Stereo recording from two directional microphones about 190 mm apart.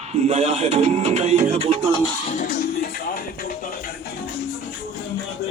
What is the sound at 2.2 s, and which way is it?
Music, 40° left (ahead or behind).